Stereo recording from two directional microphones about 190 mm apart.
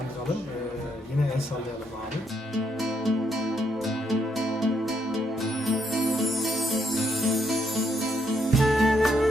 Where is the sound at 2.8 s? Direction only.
Centre (ahead or behind).